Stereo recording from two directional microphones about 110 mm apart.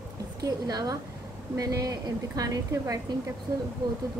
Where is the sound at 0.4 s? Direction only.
35° right (ahead or behind).